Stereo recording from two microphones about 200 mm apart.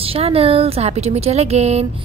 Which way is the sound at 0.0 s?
30° right (ahead or behind).